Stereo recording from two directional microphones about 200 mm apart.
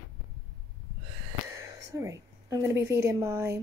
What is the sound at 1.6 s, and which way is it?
A woman's voice, 15° right (ahead or behind).